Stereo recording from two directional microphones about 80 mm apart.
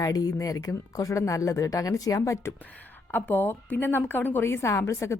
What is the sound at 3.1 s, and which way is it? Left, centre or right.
A woman's voice, left.